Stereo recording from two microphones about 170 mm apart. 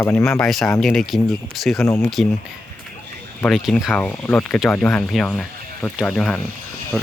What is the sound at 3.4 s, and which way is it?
Speech, centre (ahead or behind).